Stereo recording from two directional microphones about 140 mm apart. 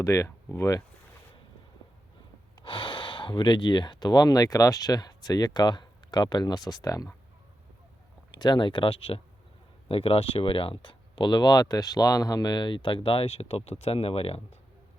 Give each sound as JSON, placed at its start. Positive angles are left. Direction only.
{"t": 0.0, "sound": "speech", "side_deg": 20}
{"t": 2.6, "sound": "speech", "side_deg": 35}
{"t": 8.3, "sound": "speech", "side_deg": 30}